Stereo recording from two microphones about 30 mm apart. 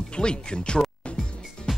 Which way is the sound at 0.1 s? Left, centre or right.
Left.